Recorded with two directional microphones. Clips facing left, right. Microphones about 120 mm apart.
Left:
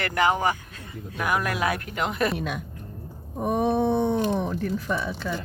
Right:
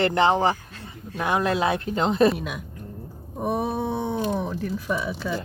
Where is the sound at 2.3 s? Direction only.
Centre (ahead or behind).